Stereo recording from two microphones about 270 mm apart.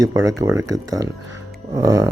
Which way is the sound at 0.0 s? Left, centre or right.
Centre.